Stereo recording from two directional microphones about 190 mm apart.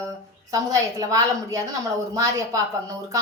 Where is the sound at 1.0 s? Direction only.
15° right (ahead or behind).